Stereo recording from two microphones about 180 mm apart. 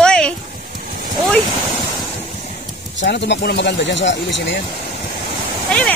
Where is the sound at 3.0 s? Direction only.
75° left (ahead or behind).